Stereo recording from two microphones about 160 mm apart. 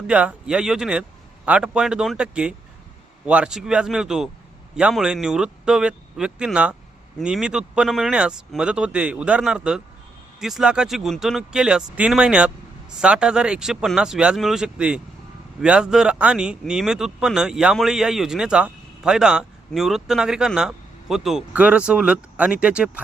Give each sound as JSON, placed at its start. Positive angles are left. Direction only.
{"t": 0.1, "sound": "speech", "side_deg": -5}